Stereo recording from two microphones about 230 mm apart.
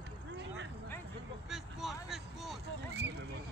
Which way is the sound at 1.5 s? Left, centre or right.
Centre.